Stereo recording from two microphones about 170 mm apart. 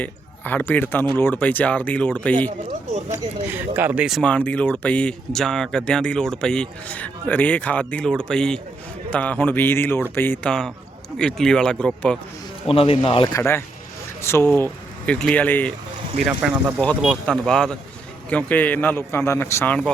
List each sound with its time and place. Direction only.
0.0 s a man's voice: 10° left (ahead or behind)
3.1 s speech: 10° right (ahead or behind); by 12.2 s 5° left (ahead or behind)
12.6 s speech: 35° left (ahead or behind); by 15.7 s 10° left (ahead or behind)
16.2 s speech: 5° right (ahead or behind)